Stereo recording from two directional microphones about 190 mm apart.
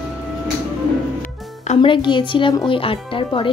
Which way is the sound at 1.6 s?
25° left (ahead or behind).